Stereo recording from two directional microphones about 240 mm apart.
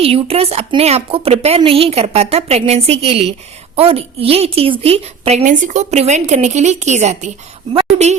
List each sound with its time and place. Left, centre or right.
0.0 s a woman's voice: right